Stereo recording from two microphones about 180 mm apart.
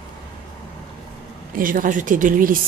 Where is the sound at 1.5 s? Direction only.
50° right (ahead or behind).